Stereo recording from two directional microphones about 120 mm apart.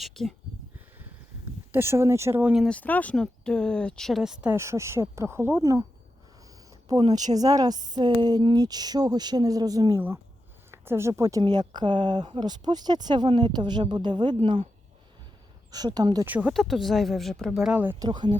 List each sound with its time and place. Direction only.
0.0 s speech: centre (ahead or behind)
1.7 s speech: 20° right (ahead or behind)
2.4 s speech: 10° right (ahead or behind)
2.6 s speech: 10° left (ahead or behind); by 4.5 s 5° right (ahead or behind)
4.5 s speech: 25° right (ahead or behind)
7.3 s speech: 30° right (ahead or behind)
10.7 s speech: 20° right (ahead or behind); by 14.7 s 45° right (ahead or behind)
15.7 s speech: 35° right (ahead or behind)
16.2 s speech: 15° right (ahead or behind)
16.5 s speech: centre (ahead or behind)
18.0 s speech: 35° right (ahead or behind)